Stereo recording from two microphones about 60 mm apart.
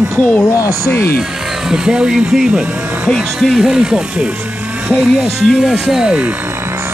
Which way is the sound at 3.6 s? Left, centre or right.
Centre.